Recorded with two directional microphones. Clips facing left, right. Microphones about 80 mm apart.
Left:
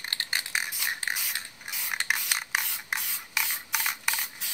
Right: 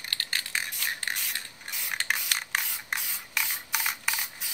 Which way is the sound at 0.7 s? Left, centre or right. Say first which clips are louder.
Left 1 dB; centre.